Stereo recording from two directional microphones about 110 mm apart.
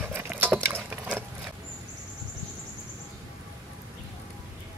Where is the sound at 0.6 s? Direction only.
15° right (ahead or behind).